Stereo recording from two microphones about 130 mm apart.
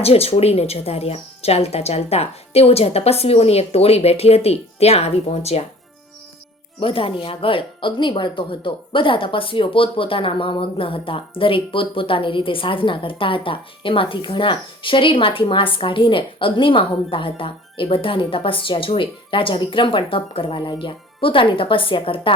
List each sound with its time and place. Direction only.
0.0 s speech: 50° left (ahead or behind)
6.7 s speech: 45° left (ahead or behind)